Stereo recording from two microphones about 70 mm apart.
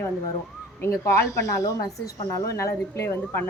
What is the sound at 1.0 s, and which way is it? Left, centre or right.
A woman's voice, left.